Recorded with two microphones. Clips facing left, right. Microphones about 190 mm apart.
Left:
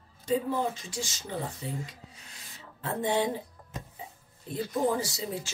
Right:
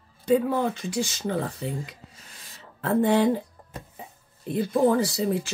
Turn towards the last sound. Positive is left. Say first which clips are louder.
# right 8 dB
turn(degrees=-60)  # may be behind; listen again after turning